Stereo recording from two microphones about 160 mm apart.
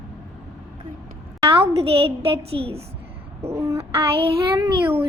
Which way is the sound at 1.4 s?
35° right (ahead or behind).